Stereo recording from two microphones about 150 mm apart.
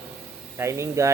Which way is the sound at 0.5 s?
20° right (ahead or behind).